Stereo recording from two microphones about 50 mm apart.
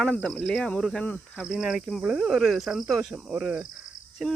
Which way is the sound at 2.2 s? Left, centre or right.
Centre.